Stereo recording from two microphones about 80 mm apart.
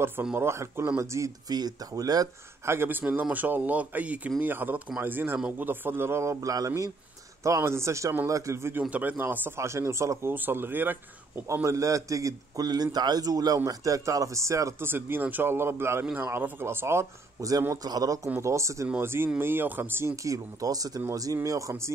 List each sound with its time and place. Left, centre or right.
0.4 s speech: right
1.5 s a man's voice: right
2.6 s speech: right
8.9 s speech: centre
9.6 s speech: right
10.3 s speech: right
11.6 s a man's voice: right
14.9 s speech: right
17.8 s a man's voice: right
20.2 s a man's voice: right